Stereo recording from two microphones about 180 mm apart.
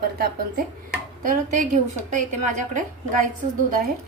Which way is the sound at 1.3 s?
50° right (ahead or behind).